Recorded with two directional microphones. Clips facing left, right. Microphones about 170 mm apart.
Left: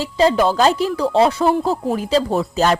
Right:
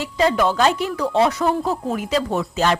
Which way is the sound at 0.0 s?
30° left (ahead or behind).